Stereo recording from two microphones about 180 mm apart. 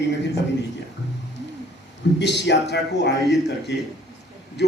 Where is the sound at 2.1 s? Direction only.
75° left (ahead or behind).